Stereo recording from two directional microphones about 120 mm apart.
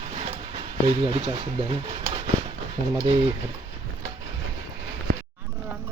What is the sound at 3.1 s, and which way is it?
Speech, 55° right (ahead or behind).